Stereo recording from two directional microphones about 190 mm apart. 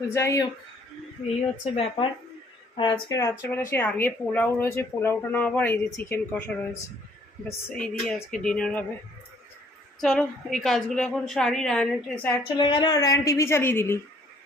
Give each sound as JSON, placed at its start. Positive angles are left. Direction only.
{"t": 0.1, "sound": "speech", "side_deg": 15}
{"t": 1.7, "sound": "a woman's voice", "side_deg": 30}
{"t": 10.0, "sound": "a woman's voice", "side_deg": 5}
{"t": 12.3, "sound": "speech", "side_deg": 25}